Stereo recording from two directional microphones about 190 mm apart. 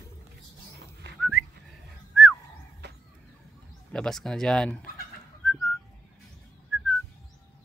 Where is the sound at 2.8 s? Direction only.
60° right (ahead or behind).